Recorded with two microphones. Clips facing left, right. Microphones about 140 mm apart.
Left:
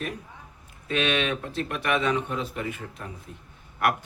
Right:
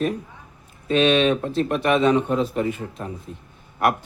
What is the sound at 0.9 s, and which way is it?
A man's voice, 30° right (ahead or behind).